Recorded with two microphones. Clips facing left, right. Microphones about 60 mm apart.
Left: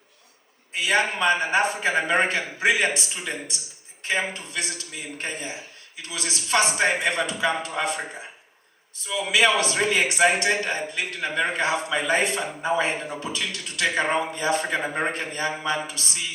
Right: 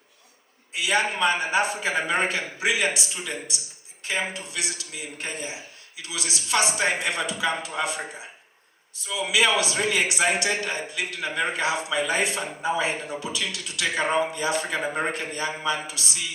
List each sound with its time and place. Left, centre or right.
0.7 s a man's voice: left
9.0 s a man's voice: left